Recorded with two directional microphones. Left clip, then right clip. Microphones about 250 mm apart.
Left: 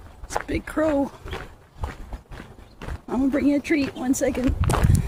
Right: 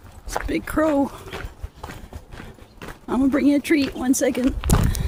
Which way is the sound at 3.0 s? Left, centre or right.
Right.